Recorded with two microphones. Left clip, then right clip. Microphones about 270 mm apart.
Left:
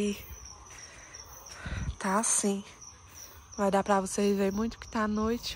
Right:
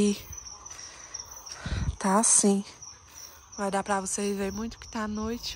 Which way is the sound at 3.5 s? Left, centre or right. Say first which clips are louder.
Left 2 dB; centre.